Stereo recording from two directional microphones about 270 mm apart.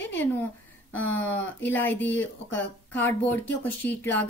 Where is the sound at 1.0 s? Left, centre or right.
Left.